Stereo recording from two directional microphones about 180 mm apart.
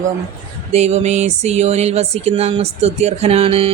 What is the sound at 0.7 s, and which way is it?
A woman's voice, 35° right (ahead or behind).